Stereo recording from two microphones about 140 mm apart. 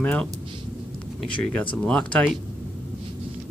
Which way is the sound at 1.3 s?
35° left (ahead or behind).